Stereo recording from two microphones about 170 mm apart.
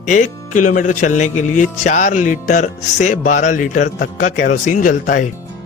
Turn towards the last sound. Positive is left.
turn(degrees=50)  # may be behind; listen again after turning